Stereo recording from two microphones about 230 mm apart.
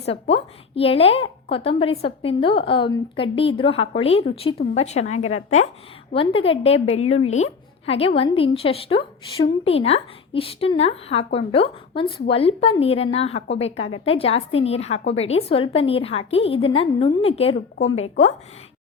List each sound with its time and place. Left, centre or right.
0.0 s a woman's voice: left